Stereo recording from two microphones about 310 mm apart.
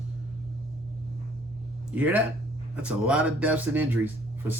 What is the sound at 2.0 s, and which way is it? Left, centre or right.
Speech, centre.